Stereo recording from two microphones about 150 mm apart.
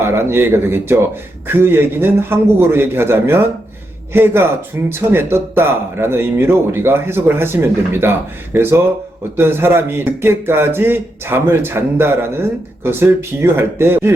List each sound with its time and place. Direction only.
0.0 s speech: 15° right (ahead or behind)